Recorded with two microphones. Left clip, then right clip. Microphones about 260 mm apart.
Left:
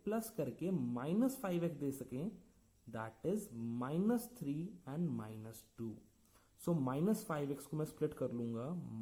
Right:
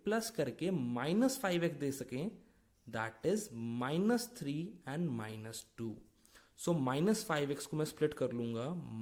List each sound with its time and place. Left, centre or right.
0.0 s speech: right